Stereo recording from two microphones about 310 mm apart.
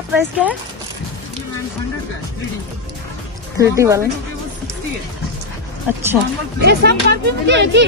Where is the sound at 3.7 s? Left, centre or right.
Centre.